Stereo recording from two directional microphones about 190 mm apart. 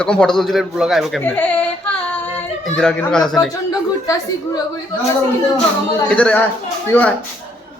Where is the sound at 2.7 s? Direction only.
5° left (ahead or behind).